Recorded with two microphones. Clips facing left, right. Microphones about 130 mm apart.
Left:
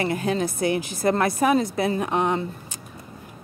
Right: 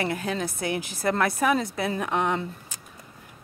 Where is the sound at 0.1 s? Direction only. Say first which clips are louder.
Left 5 dB; 45° left (ahead or behind).